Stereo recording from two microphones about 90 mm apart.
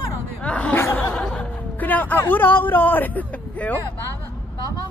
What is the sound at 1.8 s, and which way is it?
Speech, 20° left (ahead or behind).